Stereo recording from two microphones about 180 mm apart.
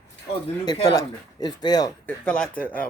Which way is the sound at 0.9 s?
20° left (ahead or behind).